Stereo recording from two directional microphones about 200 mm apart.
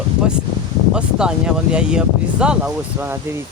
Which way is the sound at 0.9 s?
5° right (ahead or behind).